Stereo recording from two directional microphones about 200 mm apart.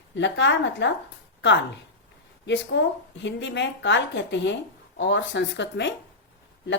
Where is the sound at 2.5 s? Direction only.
65° left (ahead or behind).